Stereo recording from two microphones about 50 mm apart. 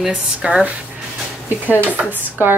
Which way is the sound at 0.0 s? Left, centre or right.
Centre.